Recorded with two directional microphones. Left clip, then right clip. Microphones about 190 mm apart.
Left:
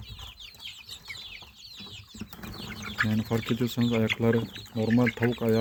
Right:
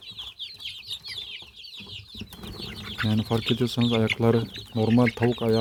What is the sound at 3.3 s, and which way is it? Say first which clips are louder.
Speech: right 4 dB; 15° right (ahead or behind).